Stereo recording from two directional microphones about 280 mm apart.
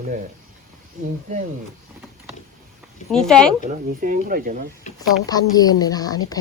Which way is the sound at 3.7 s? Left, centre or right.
Right.